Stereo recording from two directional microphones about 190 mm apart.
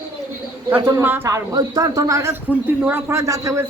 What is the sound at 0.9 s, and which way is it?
A man's voice, 15° right (ahead or behind).